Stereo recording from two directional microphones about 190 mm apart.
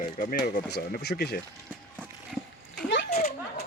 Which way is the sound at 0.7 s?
60° left (ahead or behind).